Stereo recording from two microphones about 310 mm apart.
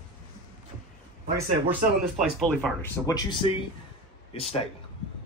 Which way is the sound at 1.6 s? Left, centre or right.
Centre.